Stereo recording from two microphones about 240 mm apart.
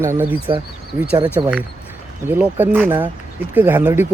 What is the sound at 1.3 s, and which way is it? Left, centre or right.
Speech, centre.